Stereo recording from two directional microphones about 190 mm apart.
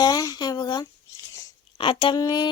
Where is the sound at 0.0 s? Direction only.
20° left (ahead or behind).